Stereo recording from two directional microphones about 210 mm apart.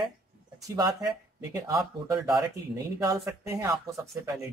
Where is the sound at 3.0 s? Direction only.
15° right (ahead or behind).